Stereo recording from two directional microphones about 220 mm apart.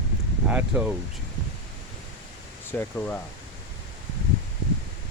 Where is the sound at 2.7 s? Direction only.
10° left (ahead or behind).